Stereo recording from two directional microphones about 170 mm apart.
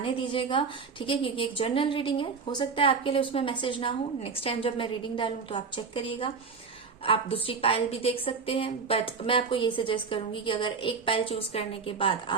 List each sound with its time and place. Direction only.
0.0 s a woman's voice: 30° left (ahead or behind)